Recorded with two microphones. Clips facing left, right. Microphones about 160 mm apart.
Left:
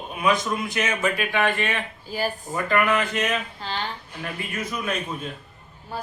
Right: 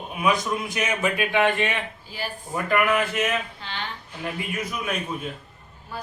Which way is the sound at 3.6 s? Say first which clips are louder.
Left 5 dB; 40° left (ahead or behind).